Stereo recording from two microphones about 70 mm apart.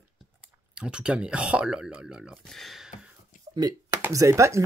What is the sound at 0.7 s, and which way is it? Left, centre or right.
Speech, centre.